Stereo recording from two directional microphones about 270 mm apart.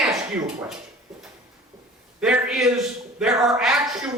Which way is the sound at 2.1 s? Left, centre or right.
Centre.